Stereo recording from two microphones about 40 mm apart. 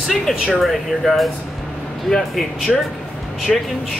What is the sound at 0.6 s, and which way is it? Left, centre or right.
Speech, centre.